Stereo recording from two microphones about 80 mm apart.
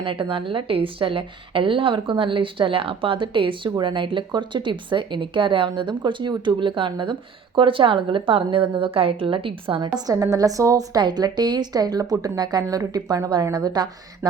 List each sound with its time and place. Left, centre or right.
0.0 s a woman's voice: right
10.2 s a woman's voice: right